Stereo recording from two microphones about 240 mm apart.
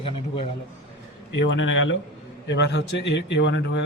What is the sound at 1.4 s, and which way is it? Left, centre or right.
A man's voice, left.